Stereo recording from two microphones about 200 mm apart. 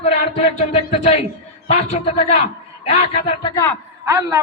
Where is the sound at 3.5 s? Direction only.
10° left (ahead or behind).